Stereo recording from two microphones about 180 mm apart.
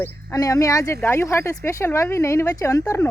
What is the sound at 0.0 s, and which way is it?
Speech, 20° left (ahead or behind).